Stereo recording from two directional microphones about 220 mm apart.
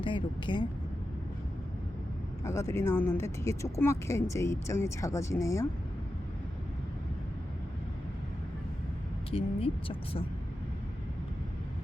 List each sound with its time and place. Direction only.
0.0 s speech: 20° left (ahead or behind)
2.4 s speech: 15° left (ahead or behind)
9.3 s speech: 25° left (ahead or behind)